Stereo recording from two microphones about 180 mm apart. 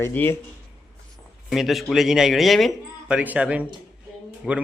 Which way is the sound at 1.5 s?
Centre (ahead or behind).